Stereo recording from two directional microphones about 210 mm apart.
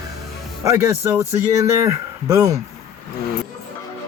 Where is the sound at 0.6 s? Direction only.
15° right (ahead or behind).